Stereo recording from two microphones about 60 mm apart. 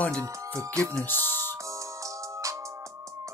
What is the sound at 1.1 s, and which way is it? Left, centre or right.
Speech, left.